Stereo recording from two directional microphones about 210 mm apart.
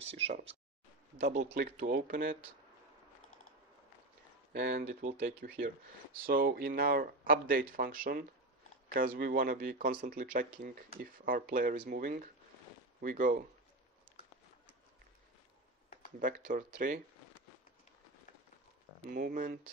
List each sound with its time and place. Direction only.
1.2 s speech: 35° right (ahead or behind)
4.5 s speech: 50° right (ahead or behind)
4.8 s speech: 30° right (ahead or behind)
6.2 s speech: 45° right (ahead or behind)
16.2 s speech: 40° right (ahead or behind)
19.0 s speech: 40° right (ahead or behind)